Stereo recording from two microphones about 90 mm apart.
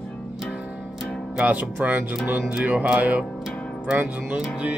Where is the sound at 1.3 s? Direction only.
15° right (ahead or behind).